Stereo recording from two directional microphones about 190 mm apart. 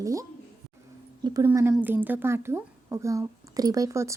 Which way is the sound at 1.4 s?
10° right (ahead or behind).